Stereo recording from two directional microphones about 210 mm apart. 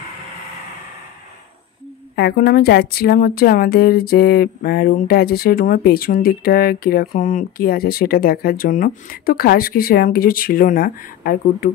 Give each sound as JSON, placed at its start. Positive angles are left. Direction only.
{"t": 2.1, "sound": "a woman's voice", "side_deg": 50}